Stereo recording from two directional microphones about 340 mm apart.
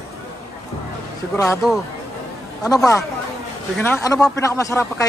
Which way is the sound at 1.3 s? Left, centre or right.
Centre.